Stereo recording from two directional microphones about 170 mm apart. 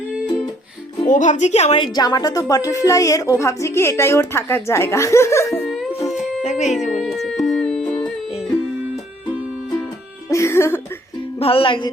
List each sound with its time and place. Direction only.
1.0 s a woman's voice: 45° left (ahead or behind); by 5.5 s 15° left (ahead or behind)
5.5 s music: centre (ahead or behind)
6.4 s music: 45° left (ahead or behind)
7.3 s music: centre (ahead or behind)
10.2 s music: 15° left (ahead or behind)
11.3 s music: 35° left (ahead or behind)